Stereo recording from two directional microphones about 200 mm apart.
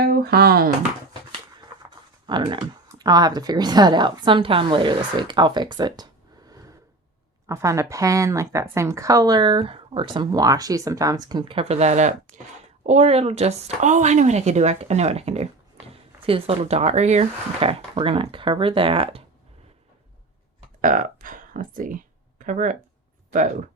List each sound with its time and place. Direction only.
0.0 s speech: 50° right (ahead or behind)
2.2 s speech: 25° right (ahead or behind)
7.4 s speech: 15° right (ahead or behind)
20.8 s speech: 40° right (ahead or behind)